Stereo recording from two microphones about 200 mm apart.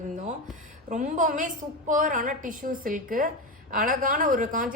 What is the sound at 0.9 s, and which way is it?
A woman's voice, 40° right (ahead or behind).